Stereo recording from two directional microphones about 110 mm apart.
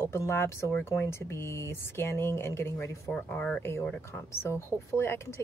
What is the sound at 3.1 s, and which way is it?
Speech, 15° left (ahead or behind).